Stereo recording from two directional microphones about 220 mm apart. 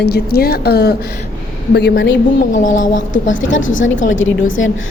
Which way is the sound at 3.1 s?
60° left (ahead or behind).